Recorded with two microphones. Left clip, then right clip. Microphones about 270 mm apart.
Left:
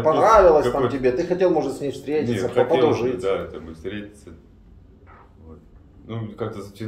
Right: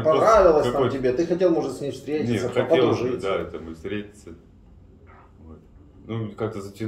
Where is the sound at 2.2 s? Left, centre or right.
Centre.